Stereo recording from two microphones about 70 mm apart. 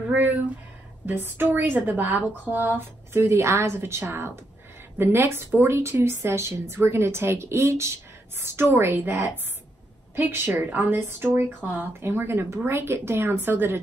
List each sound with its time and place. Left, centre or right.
0.1 s a woman's voice: right